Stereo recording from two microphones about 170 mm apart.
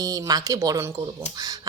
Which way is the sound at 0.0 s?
20° right (ahead or behind).